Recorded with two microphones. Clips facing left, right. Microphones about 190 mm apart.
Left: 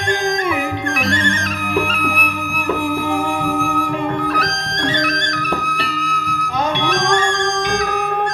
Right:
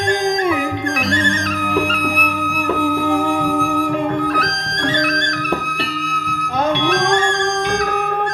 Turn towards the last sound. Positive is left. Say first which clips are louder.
# right 1 dB
turn(degrees=-55)  # may be behind; listen again after turning